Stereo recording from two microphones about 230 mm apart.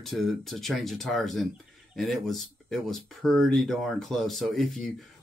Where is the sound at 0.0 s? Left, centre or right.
Centre.